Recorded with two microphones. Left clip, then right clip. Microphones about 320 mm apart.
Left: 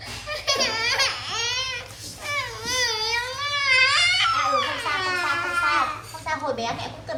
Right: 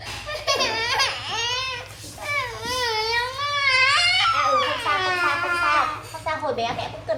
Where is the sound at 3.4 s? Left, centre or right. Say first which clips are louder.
Right 1 dB; left.